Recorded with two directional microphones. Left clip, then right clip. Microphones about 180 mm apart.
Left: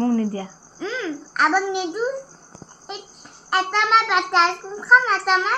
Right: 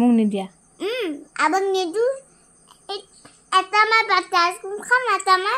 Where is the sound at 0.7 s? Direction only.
25° right (ahead or behind).